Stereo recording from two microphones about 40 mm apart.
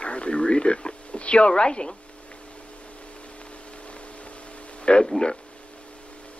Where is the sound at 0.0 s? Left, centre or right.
Left.